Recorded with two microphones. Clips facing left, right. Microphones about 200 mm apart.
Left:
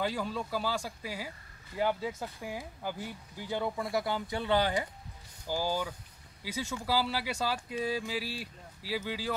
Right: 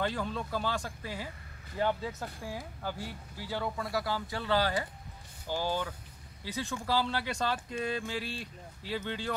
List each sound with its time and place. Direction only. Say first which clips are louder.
0.0 s speech: even; 5° left (ahead or behind)